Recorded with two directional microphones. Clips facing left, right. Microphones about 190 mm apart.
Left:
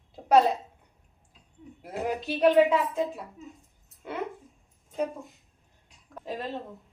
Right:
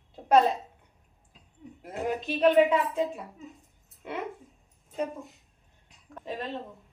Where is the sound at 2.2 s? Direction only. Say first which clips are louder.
Left 1 dB; 5° left (ahead or behind).